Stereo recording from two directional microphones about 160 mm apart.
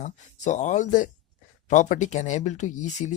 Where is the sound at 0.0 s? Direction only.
50° left (ahead or behind).